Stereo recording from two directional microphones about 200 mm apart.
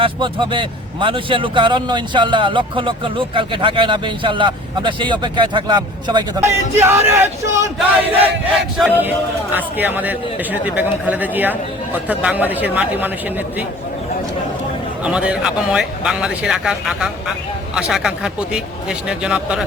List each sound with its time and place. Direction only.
0.0 s speech: 25° right (ahead or behind)
8.5 s a man's voice: centre (ahead or behind)
15.0 s speech: 5° right (ahead or behind)